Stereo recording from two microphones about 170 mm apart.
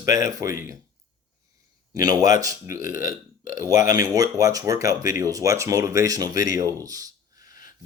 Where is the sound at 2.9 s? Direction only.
55° left (ahead or behind).